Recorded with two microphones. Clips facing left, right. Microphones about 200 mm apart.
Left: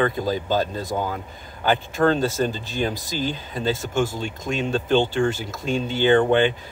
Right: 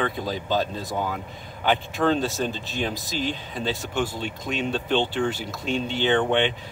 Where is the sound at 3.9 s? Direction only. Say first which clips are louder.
Left 3 dB; 45° left (ahead or behind).